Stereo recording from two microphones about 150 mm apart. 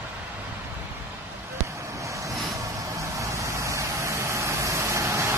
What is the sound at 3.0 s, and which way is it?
Vehicle, 20° right (ahead or behind).